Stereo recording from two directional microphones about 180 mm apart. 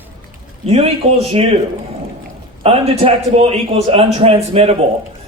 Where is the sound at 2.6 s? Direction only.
35° right (ahead or behind).